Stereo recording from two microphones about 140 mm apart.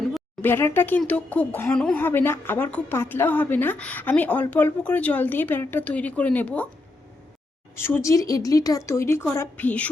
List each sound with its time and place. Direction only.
0.4 s speech: 15° left (ahead or behind)
7.8 s speech: 15° left (ahead or behind)